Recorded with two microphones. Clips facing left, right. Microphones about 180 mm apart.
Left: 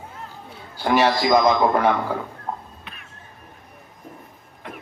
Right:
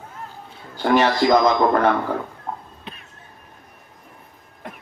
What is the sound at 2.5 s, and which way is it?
Cat, 10° left (ahead or behind).